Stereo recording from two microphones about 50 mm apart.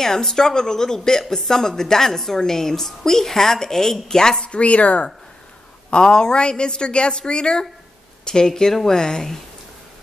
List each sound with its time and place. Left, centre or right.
0.0 s a woman's voice: centre